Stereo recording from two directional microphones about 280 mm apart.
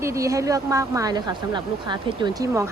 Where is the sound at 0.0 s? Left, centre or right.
Centre.